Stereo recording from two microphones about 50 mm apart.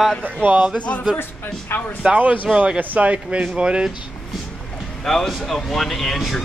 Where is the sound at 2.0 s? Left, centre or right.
Right.